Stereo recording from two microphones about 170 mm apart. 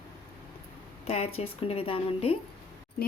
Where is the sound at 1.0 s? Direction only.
35° left (ahead or behind).